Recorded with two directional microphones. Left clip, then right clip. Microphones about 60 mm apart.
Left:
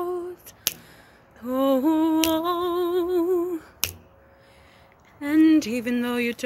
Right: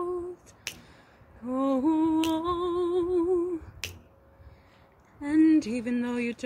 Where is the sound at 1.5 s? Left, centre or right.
Right.